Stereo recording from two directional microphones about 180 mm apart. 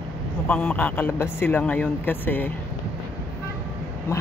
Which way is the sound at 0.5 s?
5° left (ahead or behind).